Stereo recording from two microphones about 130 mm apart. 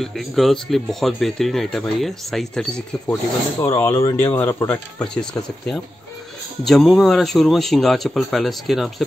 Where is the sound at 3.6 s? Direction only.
20° left (ahead or behind).